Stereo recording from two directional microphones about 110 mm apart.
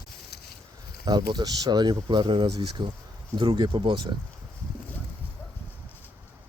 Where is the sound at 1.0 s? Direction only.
40° right (ahead or behind).